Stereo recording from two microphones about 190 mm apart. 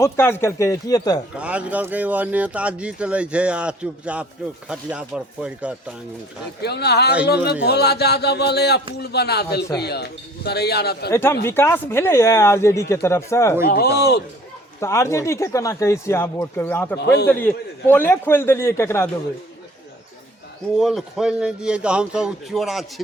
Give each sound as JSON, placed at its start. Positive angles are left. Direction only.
{"t": 0.0, "sound": "speech", "side_deg": 15}
{"t": 1.4, "sound": "speech", "side_deg": -5}
{"t": 6.6, "sound": "speech", "side_deg": 60}
{"t": 11.1, "sound": "speech", "side_deg": 15}
{"t": 13.7, "sound": "speech", "side_deg": 55}
{"t": 14.8, "sound": "speech", "side_deg": 15}
{"t": 17.0, "sound": "speech", "side_deg": 60}
{"t": 17.2, "sound": "speech", "side_deg": 10}
{"t": 20.7, "sound": "speech", "side_deg": 0}